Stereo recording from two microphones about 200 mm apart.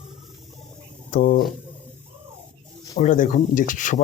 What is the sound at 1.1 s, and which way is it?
Speech, 40° left (ahead or behind).